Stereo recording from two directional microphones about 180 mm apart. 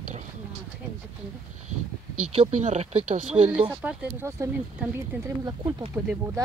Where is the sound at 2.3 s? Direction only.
35° right (ahead or behind).